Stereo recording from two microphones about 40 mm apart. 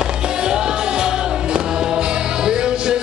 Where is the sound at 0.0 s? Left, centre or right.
Centre.